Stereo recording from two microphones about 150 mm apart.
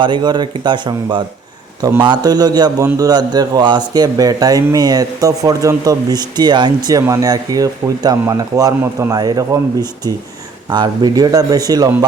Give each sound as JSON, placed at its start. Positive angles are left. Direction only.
{"t": 0.0, "sound": "speech", "side_deg": -30}
{"t": 10.7, "sound": "speech", "side_deg": -25}